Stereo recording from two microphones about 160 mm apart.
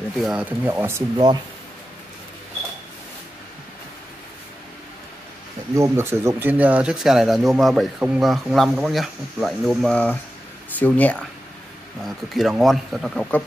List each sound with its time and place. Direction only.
0.2 s speech: 5° right (ahead or behind)
1.1 s speech: 25° right (ahead or behind)
5.8 s speech: 15° right (ahead or behind); by 13.4 s 5° left (ahead or behind)